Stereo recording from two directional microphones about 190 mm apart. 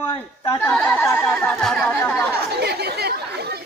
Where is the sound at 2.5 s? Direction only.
60° right (ahead or behind).